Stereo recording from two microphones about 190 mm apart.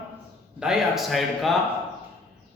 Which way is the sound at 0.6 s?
Centre (ahead or behind).